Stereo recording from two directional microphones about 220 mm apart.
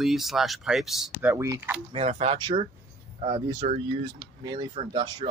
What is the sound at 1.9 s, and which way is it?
Speech, 30° right (ahead or behind).